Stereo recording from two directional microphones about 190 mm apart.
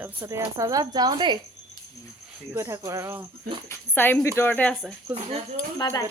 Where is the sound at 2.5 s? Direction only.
15° right (ahead or behind).